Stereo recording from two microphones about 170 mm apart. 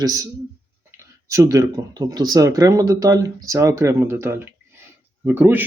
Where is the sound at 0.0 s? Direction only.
20° right (ahead or behind).